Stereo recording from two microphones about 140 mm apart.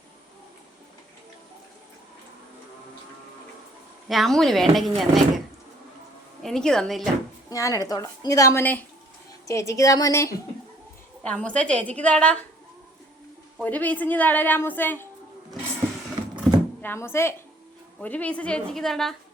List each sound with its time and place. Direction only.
4.1 s speech: centre (ahead or behind)
6.4 s speech: 5° left (ahead or behind)
7.5 s a woman's voice: 25° left (ahead or behind)
11.2 s a woman's voice: 10° left (ahead or behind)
13.6 s a woman's voice: 10° left (ahead or behind)
16.5 s a sound: centre (ahead or behind)
16.8 s a woman's voice: 15° left (ahead or behind)